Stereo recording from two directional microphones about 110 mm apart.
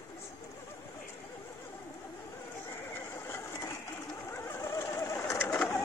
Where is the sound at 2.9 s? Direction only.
25° left (ahead or behind).